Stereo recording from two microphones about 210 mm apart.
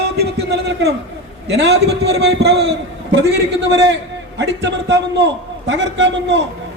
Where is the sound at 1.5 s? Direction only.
55° right (ahead or behind).